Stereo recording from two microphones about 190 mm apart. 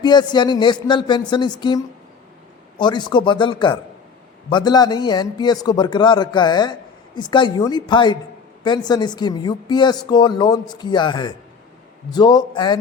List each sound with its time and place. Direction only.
0.0 s speech: 25° left (ahead or behind)